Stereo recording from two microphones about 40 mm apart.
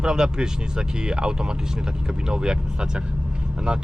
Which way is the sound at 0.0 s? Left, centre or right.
Centre.